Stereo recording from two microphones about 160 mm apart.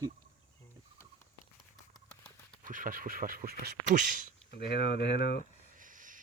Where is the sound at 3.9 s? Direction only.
55° right (ahead or behind).